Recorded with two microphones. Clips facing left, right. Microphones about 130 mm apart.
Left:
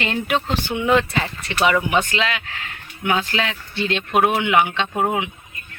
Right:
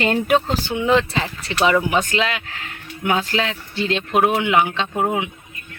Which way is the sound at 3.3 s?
30° right (ahead or behind).